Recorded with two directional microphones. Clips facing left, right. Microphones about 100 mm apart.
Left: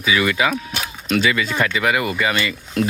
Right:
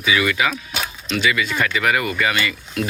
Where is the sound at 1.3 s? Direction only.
35° left (ahead or behind).